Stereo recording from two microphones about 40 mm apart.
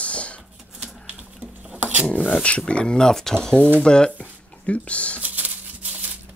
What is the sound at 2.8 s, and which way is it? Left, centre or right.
Speech, centre.